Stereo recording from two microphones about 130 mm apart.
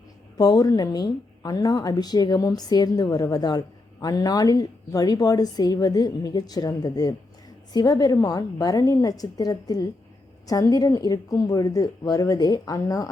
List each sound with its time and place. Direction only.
0.3 s a woman's voice: 30° left (ahead or behind)